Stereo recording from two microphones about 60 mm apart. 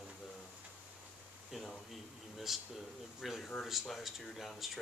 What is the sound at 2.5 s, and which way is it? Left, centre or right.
A man's voice, centre.